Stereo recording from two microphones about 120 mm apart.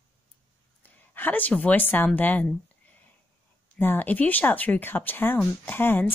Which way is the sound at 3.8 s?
15° left (ahead or behind).